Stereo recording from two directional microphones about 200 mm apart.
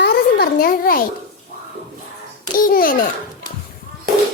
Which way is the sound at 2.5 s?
45° left (ahead or behind).